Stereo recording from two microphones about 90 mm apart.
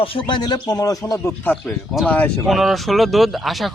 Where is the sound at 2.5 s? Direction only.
Centre (ahead or behind).